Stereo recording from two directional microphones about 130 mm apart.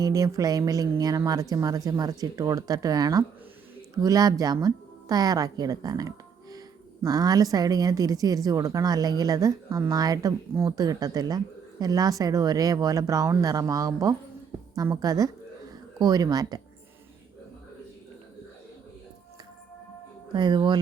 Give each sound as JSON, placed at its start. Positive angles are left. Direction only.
{"t": 0.0, "sound": "a woman's voice", "side_deg": -25}
{"t": 20.3, "sound": "speech", "side_deg": -35}